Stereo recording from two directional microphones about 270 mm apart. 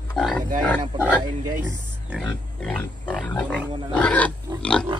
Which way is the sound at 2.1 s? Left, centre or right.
Centre.